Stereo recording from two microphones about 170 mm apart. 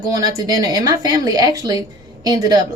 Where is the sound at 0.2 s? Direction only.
20° right (ahead or behind).